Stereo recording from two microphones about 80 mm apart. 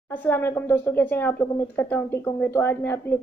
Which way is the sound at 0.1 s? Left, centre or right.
Left.